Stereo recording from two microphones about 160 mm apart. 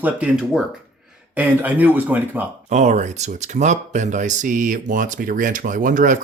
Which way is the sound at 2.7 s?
45° right (ahead or behind).